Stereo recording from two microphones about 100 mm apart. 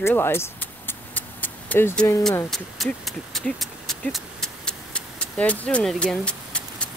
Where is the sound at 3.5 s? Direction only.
5° left (ahead or behind).